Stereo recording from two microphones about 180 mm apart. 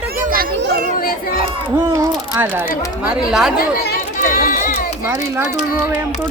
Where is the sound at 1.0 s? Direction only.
55° left (ahead or behind).